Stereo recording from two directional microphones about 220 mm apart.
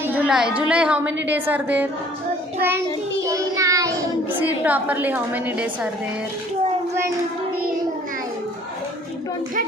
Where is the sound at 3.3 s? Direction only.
15° right (ahead or behind).